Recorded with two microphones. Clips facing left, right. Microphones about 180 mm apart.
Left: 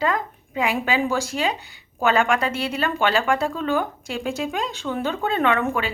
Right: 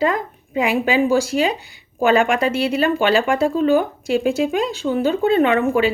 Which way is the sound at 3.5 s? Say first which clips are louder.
Right 8 dB; 40° right (ahead or behind).